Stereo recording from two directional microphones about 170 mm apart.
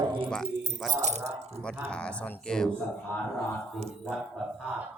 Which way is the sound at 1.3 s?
40° right (ahead or behind).